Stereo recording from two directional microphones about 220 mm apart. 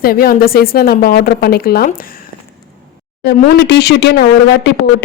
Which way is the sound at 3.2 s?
50° left (ahead or behind).